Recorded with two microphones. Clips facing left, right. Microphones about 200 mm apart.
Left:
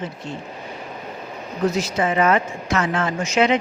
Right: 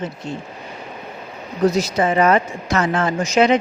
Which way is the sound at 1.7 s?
40° right (ahead or behind).